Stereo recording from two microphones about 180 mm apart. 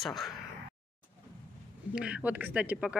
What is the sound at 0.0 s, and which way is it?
Speech, centre (ahead or behind).